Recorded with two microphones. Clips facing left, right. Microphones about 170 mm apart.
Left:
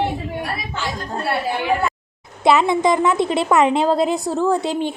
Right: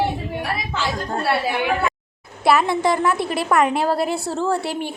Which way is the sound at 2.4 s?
20° left (ahead or behind).